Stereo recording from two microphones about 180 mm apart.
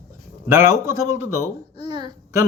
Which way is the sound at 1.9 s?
25° right (ahead or behind).